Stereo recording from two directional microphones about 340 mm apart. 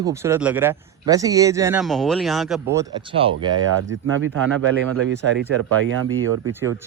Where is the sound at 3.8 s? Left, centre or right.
Right.